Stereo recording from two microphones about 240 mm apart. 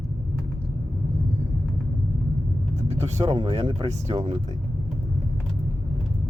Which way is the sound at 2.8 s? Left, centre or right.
Right.